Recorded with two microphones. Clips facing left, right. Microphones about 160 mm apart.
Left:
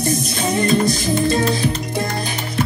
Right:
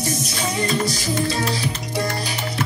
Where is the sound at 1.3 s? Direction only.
50° left (ahead or behind).